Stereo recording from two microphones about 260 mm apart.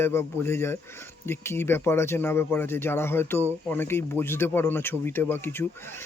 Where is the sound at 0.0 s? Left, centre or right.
Centre.